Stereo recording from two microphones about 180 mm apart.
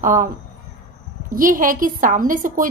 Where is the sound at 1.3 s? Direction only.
50° right (ahead or behind).